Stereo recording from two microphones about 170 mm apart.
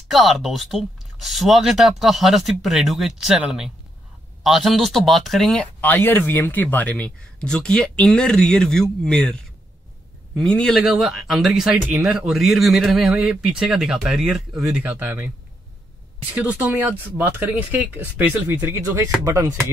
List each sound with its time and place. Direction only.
0.1 s speech: centre (ahead or behind)
16.3 s speech: 10° right (ahead or behind)